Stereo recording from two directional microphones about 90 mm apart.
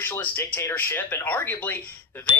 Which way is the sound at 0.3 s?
20° left (ahead or behind).